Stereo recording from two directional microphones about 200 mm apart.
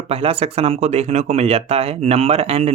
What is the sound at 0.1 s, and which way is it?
Speech, 30° right (ahead or behind).